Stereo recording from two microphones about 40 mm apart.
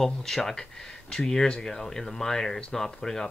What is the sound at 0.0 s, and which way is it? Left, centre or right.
Speech, centre.